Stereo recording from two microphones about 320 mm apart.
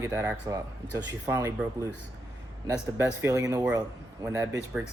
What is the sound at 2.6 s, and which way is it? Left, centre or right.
A man's voice, centre.